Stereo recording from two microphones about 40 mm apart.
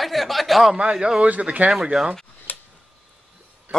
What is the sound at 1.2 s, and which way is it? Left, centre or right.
Speech, right.